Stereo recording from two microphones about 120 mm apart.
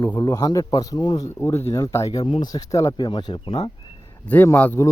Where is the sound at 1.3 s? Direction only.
20° left (ahead or behind).